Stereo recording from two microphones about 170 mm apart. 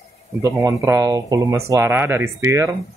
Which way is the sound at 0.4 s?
15° right (ahead or behind).